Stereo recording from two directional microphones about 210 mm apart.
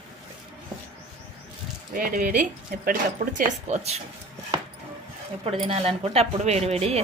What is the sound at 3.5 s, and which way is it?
Speech, 30° right (ahead or behind).